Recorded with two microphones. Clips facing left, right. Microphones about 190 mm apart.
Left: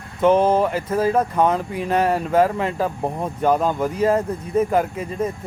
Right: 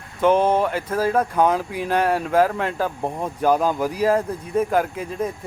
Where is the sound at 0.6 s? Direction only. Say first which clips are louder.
Left 2 dB; centre (ahead or behind).